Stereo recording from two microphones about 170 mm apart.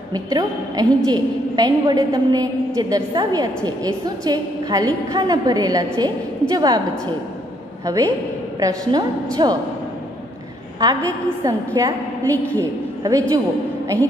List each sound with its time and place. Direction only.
0.1 s a woman's voice: 25° right (ahead or behind)
7.8 s a man's voice: 20° right (ahead or behind)
10.8 s a woman's voice: 20° right (ahead or behind)